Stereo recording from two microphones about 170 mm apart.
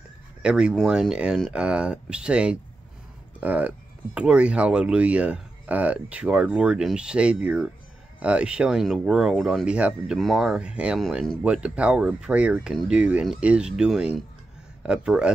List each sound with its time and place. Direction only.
0.4 s speech: 5° right (ahead or behind)